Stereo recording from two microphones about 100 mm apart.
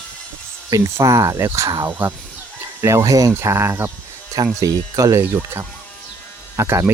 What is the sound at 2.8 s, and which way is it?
Speech, 30° right (ahead or behind).